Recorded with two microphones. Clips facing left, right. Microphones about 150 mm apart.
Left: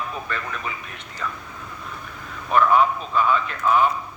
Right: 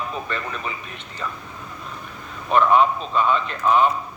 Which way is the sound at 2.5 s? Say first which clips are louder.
Right 1 dB; 20° right (ahead or behind).